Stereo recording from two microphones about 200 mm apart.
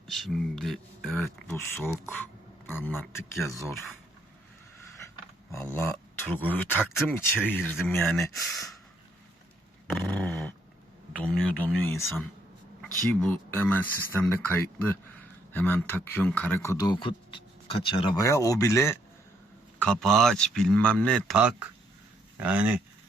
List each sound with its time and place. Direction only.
0.1 s speech: centre (ahead or behind)
1.2 s speech: 10° left (ahead or behind)
5.7 s speech: 10° left (ahead or behind)
8.2 s speech: 15° left (ahead or behind)
10.0 s speech: 10° left (ahead or behind)
10.2 s dog: centre (ahead or behind)
11.2 s speech: 5° left (ahead or behind)
19.8 s speech: 5° left (ahead or behind)